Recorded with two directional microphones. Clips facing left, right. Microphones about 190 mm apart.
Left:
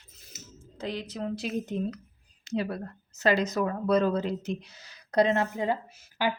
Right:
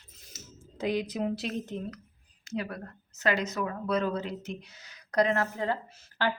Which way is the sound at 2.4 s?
25° left (ahead or behind).